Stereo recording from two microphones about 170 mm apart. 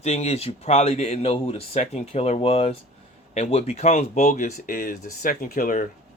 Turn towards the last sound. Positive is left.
turn(degrees=55)  # may be behind; listen again after turning